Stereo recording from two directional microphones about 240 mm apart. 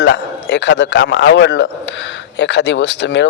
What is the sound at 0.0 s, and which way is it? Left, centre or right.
A man's voice, left.